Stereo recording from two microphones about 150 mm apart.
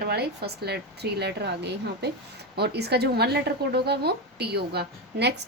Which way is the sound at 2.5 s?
90° right.